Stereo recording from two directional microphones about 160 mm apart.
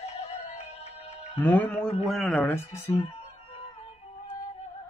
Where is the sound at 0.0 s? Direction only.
40° left (ahead or behind).